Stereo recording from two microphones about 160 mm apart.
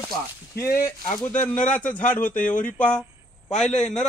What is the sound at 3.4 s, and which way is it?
Speech, 45° left (ahead or behind).